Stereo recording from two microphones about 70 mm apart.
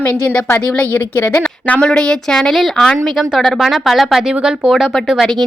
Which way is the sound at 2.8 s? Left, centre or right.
Centre.